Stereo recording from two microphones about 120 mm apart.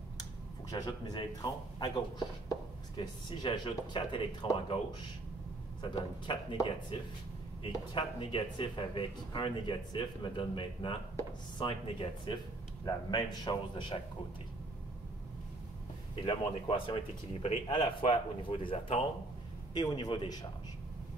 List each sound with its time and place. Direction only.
0.2 s speech: 30° left (ahead or behind)
16.3 s speech: 45° left (ahead or behind)
19.7 s speech: 35° left (ahead or behind)